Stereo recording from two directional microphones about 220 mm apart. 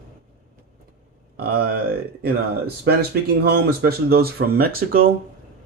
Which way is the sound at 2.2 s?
45° right (ahead or behind).